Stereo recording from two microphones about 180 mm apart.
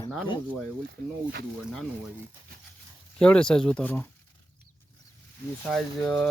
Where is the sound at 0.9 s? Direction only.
65° right (ahead or behind).